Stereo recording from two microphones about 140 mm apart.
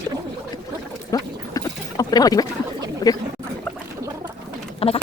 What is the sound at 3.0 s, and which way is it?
Speech, 25° left (ahead or behind).